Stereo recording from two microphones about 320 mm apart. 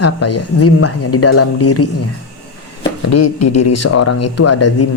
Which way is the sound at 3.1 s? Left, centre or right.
Left.